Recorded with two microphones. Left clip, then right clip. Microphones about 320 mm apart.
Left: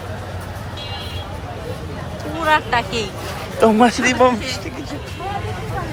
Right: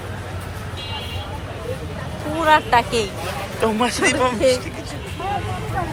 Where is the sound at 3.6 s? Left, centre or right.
Left.